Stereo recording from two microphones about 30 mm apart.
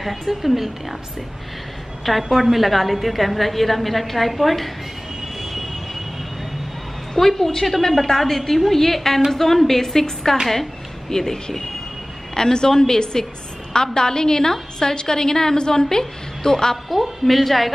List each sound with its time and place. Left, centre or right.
0.0 s a woman's voice: centre
2.3 s a woman's voice: centre
5.4 s train: centre
7.2 s a woman's voice: centre
12.4 s a woman's voice: left
16.9 s a woman's voice: centre